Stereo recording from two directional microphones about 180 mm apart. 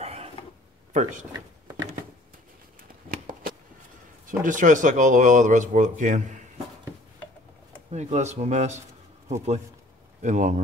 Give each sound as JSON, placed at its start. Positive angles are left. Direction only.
{"t": 0.0, "sound": "a sound", "side_deg": -35}
{"t": 0.9, "sound": "speech", "side_deg": -45}
{"t": 3.1, "sound": "shuffling cards", "side_deg": -50}
{"t": 4.3, "sound": "speech", "side_deg": -45}
{"t": 7.9, "sound": "speech", "side_deg": -40}
{"t": 10.2, "sound": "speech", "side_deg": -40}